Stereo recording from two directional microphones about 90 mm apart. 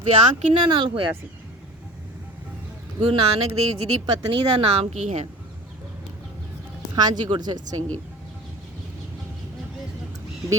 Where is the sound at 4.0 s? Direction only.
80° right.